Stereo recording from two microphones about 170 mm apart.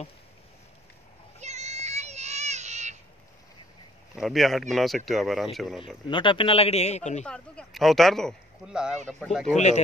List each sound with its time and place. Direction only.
1.4 s a sound: 40° right (ahead or behind)
4.1 s speech: centre (ahead or behind)
6.0 s speech: 30° left (ahead or behind)
7.2 s speech: 5° left (ahead or behind)